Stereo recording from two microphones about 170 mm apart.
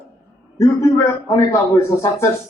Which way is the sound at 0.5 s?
15° left (ahead or behind).